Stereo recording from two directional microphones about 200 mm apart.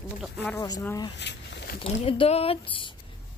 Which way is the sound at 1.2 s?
55° left (ahead or behind).